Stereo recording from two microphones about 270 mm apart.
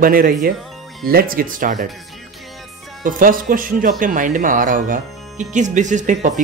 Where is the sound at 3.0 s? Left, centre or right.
Right.